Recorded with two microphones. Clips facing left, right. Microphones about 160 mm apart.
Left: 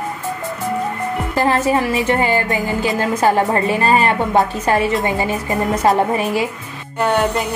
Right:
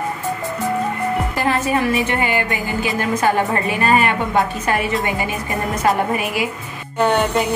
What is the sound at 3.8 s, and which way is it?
A woman's voice, 35° left (ahead or behind).